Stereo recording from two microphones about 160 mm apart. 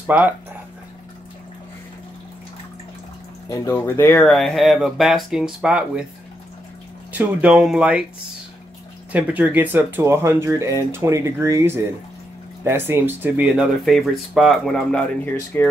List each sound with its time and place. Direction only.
0.0 s speech: 10° right (ahead or behind)
3.4 s speech: 20° left (ahead or behind); by 6.0 s 5° right (ahead or behind)
7.1 s speech: 10° right (ahead or behind)
9.1 s speech: 10° right (ahead or behind)
15.5 s speech: 15° left (ahead or behind)